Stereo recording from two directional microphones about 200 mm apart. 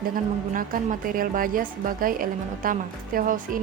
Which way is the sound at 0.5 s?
45° right (ahead or behind).